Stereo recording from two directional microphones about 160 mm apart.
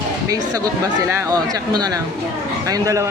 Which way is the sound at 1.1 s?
20° right (ahead or behind).